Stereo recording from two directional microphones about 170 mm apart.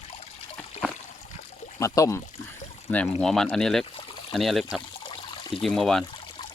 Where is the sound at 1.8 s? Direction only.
20° left (ahead or behind).